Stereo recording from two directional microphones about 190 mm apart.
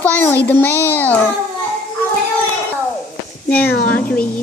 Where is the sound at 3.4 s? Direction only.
10° left (ahead or behind).